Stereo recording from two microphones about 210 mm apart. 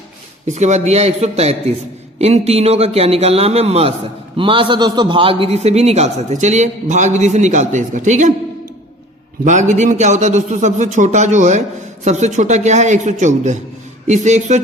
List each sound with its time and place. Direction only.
0.4 s a man's voice: 35° right (ahead or behind)
9.4 s a man's voice: 35° right (ahead or behind)